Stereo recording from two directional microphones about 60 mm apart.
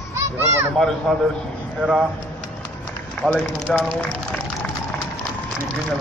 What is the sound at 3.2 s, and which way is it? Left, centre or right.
Speech, left.